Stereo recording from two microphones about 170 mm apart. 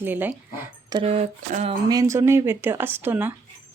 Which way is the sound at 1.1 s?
40° right (ahead or behind).